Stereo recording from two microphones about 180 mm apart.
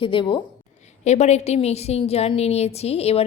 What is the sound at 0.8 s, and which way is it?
A woman's voice, 40° left (ahead or behind).